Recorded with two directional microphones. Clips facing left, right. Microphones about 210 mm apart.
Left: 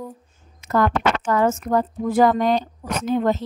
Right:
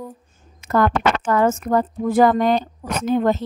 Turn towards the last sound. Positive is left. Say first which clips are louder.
# right 2 dB
turn(degrees=-55)  # may be behind; listen again after turning